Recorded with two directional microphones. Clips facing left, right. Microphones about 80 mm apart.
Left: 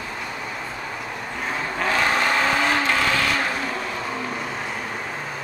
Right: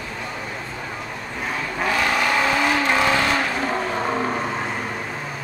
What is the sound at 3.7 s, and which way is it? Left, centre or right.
Vehicle, right.